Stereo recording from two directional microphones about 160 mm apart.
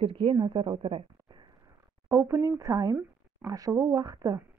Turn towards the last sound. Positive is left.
turn(degrees=-20)  # may be behind; listen again after turning